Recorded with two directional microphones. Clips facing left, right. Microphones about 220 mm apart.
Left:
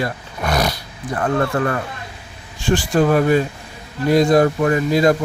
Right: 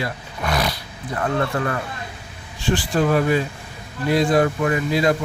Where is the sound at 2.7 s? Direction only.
45° left (ahead or behind).